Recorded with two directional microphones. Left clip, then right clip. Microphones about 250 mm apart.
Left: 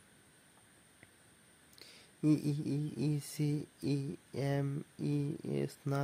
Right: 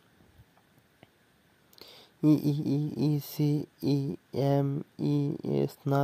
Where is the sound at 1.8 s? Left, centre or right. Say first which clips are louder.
Right 8 dB; right.